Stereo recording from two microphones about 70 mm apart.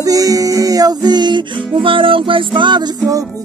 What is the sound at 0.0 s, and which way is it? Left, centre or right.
Music, right.